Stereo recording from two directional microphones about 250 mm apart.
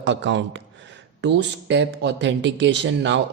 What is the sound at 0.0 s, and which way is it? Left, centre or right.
Speech, right.